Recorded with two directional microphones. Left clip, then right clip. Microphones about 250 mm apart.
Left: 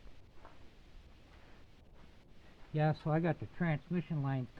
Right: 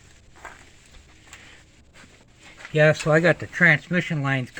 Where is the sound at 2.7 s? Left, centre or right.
Centre.